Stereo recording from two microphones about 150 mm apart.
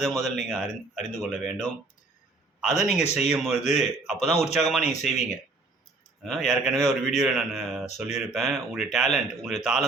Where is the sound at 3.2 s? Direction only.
5° right (ahead or behind).